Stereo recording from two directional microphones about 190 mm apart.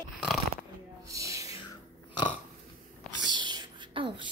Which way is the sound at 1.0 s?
15° right (ahead or behind).